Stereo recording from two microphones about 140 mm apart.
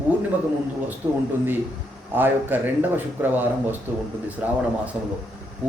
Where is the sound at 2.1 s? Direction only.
15° right (ahead or behind).